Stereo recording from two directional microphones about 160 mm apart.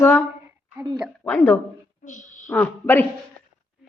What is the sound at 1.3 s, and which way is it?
Speech, 10° left (ahead or behind).